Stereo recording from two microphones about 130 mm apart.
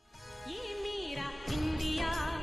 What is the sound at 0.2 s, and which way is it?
Music, centre (ahead or behind).